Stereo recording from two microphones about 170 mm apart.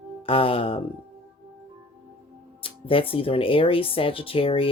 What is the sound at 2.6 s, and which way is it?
Speech, 30° left (ahead or behind).